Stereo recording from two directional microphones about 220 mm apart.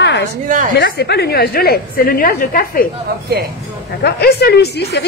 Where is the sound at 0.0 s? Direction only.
50° left (ahead or behind).